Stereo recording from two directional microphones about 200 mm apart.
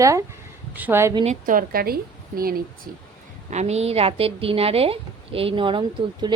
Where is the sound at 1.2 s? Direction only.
40° right (ahead or behind).